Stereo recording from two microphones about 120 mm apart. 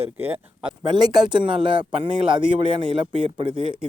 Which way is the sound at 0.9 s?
35° right (ahead or behind).